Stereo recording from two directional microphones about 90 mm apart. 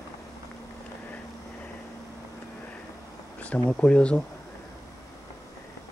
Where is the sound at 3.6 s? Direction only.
10° left (ahead or behind).